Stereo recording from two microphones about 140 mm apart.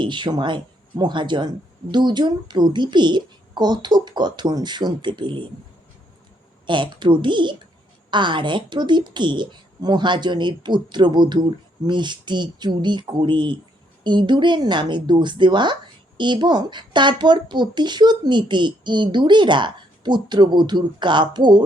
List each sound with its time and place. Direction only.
0.0 s speech: 35° right (ahead or behind)
6.7 s speech: 35° right (ahead or behind)